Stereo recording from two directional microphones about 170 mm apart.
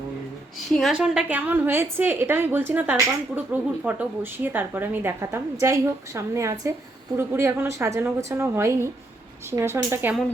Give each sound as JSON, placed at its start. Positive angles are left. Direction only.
{"t": 0.8, "sound": "a woman's voice", "side_deg": 0}